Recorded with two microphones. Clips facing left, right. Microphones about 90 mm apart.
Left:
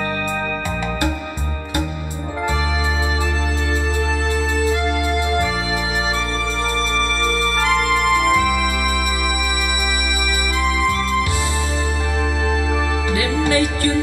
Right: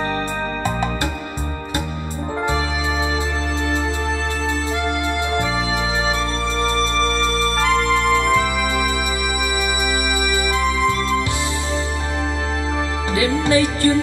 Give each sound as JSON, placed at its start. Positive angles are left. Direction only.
{"t": 7.3, "sound": "music", "side_deg": -25}
{"t": 13.1, "sound": "music", "side_deg": -25}